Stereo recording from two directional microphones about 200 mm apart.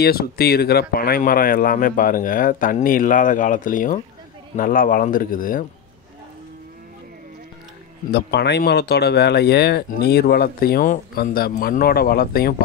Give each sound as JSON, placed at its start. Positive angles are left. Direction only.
{"t": 0.0, "sound": "speech", "side_deg": 50}
{"t": 8.1, "sound": "speech", "side_deg": 55}